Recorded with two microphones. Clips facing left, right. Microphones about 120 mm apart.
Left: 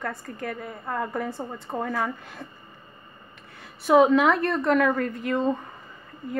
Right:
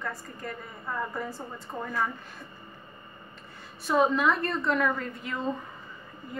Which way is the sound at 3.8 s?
80° left.